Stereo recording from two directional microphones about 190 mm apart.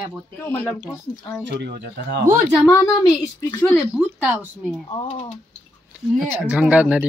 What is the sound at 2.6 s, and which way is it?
A woman's voice, 20° left (ahead or behind).